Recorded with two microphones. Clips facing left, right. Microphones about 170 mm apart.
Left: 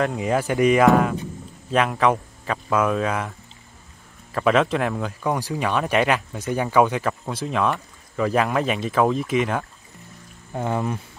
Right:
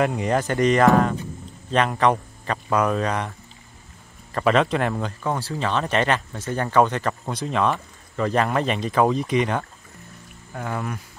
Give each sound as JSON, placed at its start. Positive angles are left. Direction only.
{"t": 0.0, "sound": "speech", "side_deg": 0}
{"t": 5.2, "sound": "speech", "side_deg": 15}
{"t": 10.5, "sound": "speech", "side_deg": 20}